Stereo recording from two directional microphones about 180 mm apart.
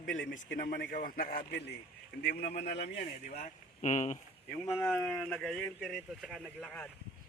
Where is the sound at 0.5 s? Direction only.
50° left (ahead or behind).